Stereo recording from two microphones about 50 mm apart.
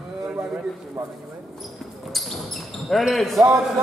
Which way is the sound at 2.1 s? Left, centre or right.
Centre.